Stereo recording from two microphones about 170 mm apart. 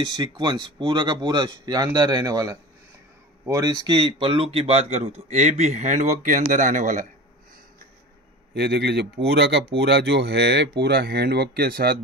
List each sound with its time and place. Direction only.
0.1 s speech: 25° right (ahead or behind); by 7.1 s 50° right (ahead or behind)
8.5 s speech: 70° right (ahead or behind)